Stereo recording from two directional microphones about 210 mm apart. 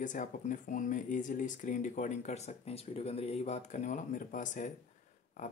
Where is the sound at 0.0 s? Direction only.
35° left (ahead or behind).